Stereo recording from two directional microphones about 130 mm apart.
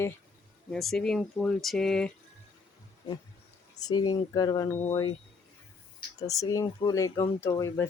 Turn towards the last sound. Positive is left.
turn(degrees=20)  # may be behind; listen again after turning